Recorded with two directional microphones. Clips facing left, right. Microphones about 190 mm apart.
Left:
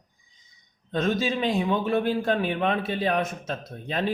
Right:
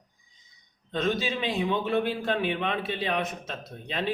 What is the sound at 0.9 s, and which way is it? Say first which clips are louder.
A man's voice: left 3 dB; 45° left (ahead or behind).